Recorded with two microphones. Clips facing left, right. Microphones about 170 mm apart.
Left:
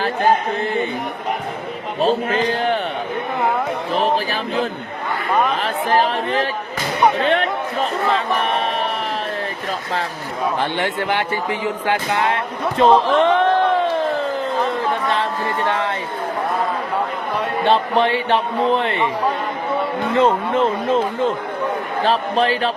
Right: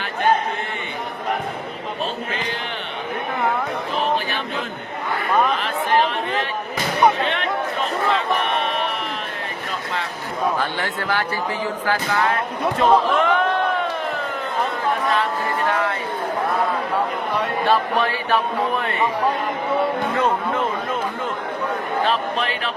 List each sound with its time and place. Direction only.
2.0 s a man's voice: 35° left (ahead or behind)
3.9 s a sound: 35° left (ahead or behind)
5.5 s speech: 40° left (ahead or behind)
7.3 s a sound: 40° left (ahead or behind)
10.6 s speech: 20° left (ahead or behind)
12.8 s music: 30° left (ahead or behind)
15.1 s a sound: 30° left (ahead or behind)
17.7 s speech: 25° left (ahead or behind)
20.1 s speech: 30° left (ahead or behind)
22.0 s a man's voice: 35° left (ahead or behind)